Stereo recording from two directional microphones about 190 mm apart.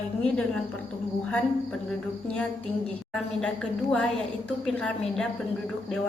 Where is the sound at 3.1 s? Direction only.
5° left (ahead or behind).